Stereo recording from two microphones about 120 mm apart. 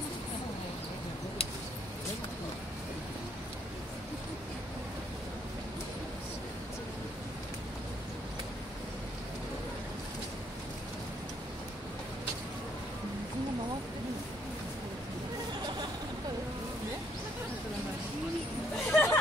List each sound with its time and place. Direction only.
18.9 s music: 20° left (ahead or behind)